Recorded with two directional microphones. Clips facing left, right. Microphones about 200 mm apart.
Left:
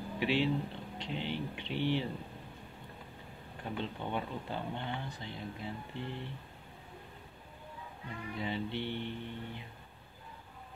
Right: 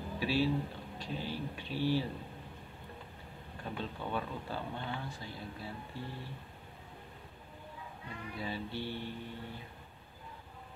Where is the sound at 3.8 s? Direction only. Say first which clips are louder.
Even; 20° left (ahead or behind).